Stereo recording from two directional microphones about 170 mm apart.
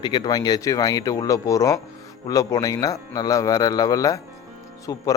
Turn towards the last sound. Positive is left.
turn(degrees=20)  # may be behind; listen again after turning